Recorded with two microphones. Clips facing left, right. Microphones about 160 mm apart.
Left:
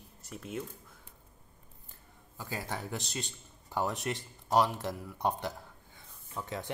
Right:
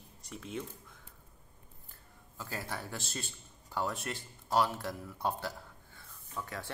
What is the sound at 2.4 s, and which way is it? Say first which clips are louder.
A man's voice: left 2 dB; 15° left (ahead or behind).